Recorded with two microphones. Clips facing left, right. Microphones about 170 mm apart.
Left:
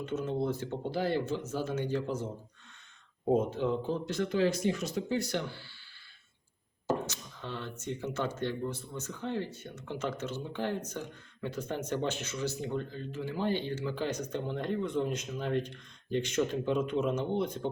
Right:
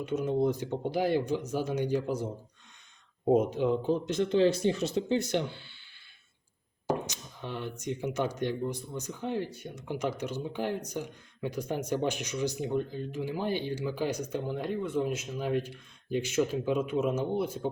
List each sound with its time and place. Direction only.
0.0 s speech: 15° right (ahead or behind)
6.8 s speech: 15° right (ahead or behind)